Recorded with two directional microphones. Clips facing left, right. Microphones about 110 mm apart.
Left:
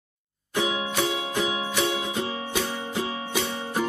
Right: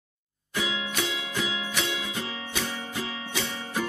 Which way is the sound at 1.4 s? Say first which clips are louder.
Left 5 dB; 25° left (ahead or behind).